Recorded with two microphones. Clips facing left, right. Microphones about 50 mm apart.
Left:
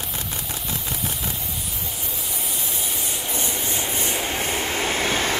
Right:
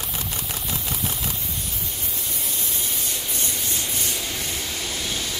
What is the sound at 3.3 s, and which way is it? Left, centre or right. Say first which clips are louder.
Train: left 5 dB; centre.